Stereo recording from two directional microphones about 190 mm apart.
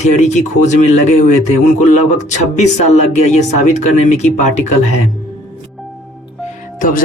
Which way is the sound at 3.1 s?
35° left (ahead or behind).